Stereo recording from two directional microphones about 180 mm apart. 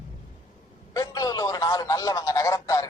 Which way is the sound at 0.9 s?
20° left (ahead or behind).